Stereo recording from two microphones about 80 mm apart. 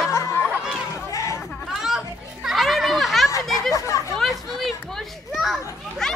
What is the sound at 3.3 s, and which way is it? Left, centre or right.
Chatter, left.